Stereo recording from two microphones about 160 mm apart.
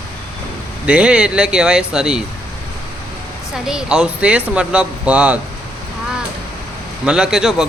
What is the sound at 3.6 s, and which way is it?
Speech, 5° right (ahead or behind).